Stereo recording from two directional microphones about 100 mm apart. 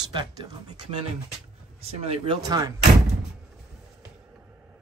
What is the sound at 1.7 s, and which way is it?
Speech, 85° right.